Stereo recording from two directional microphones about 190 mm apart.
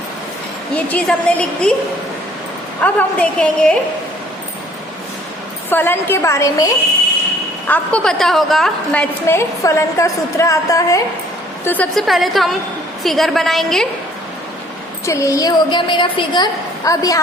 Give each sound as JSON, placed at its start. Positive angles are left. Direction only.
{"t": 0.9, "sound": "a woman's voice", "side_deg": 5}
{"t": 2.8, "sound": "a woman's voice", "side_deg": 5}
{"t": 5.7, "sound": "a woman's voice", "side_deg": 10}
{"t": 7.7, "sound": "a woman's voice", "side_deg": 5}
{"t": 15.0, "sound": "a woman's voice", "side_deg": 15}